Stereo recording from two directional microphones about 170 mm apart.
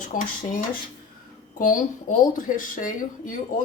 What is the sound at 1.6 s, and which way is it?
A woman's voice, 50° left (ahead or behind).